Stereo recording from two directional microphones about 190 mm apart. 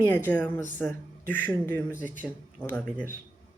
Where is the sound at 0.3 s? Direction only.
10° left (ahead or behind).